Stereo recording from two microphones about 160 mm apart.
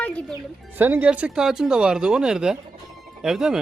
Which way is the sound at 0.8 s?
10° right (ahead or behind).